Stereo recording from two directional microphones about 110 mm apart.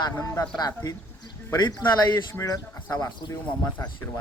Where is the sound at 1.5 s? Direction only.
40° left (ahead or behind).